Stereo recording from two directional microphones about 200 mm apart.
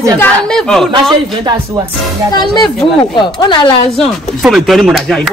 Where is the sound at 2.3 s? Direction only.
20° left (ahead or behind).